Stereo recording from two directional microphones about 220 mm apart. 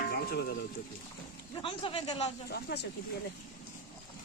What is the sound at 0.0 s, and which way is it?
Stir, 45° left (ahead or behind).